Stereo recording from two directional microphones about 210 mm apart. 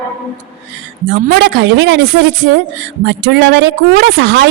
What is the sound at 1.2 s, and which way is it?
A woman's voice, 50° right (ahead or behind).